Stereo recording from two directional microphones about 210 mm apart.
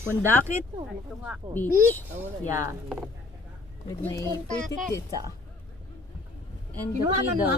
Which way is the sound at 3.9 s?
15° left (ahead or behind).